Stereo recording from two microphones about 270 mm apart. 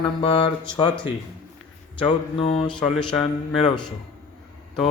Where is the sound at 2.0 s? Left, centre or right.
Centre.